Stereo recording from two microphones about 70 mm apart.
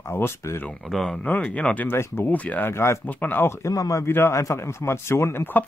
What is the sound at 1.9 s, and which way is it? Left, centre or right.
Speech, left.